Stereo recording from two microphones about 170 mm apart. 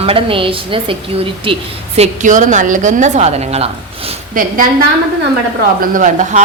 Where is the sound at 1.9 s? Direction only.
45° right (ahead or behind).